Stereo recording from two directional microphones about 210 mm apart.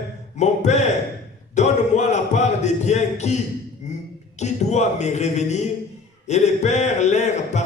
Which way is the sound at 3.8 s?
35° left (ahead or behind).